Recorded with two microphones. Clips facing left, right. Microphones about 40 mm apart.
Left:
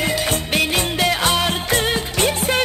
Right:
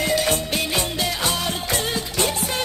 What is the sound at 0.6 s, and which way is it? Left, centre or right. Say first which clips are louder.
Music: left 5 dB; left.